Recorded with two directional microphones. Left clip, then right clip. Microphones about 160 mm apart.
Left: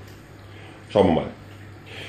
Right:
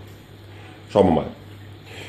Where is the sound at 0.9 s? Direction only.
15° right (ahead or behind).